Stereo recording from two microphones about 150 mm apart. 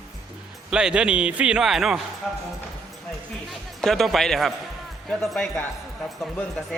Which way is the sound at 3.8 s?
Centre (ahead or behind).